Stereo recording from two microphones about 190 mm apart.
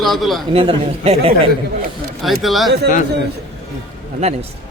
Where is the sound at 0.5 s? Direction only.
30° right (ahead or behind).